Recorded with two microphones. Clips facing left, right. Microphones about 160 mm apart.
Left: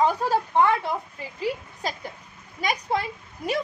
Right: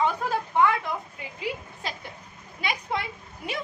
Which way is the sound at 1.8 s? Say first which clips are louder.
Left 6 dB; 40° left (ahead or behind).